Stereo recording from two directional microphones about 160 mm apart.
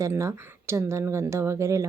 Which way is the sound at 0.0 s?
20° right (ahead or behind).